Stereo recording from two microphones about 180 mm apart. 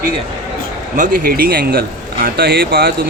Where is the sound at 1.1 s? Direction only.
55° right (ahead or behind).